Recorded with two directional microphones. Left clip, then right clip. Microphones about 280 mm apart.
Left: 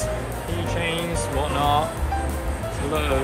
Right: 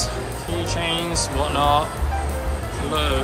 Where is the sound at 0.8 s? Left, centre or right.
Centre.